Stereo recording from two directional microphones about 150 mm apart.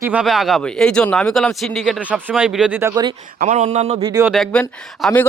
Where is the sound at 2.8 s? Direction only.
20° right (ahead or behind).